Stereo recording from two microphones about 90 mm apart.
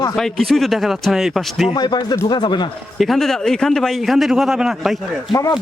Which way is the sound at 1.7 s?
50° left (ahead or behind).